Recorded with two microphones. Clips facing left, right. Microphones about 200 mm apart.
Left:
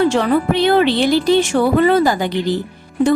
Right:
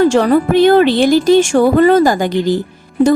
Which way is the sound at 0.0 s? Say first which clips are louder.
Right 4 dB; 40° right (ahead or behind).